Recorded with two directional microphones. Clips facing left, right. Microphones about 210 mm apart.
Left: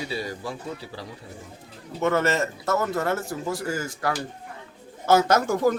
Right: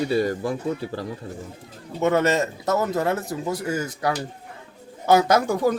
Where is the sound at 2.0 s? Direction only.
20° right (ahead or behind).